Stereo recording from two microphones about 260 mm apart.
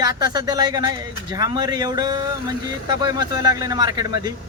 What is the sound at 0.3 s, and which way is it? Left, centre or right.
Speech, centre.